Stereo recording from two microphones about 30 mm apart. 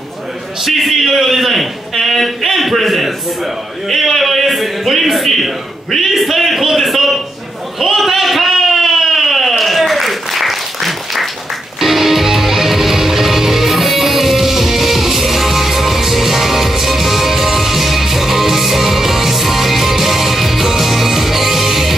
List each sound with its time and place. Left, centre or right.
0.7 s a man's voice: centre
7.8 s a sound: centre
11.8 s music: centre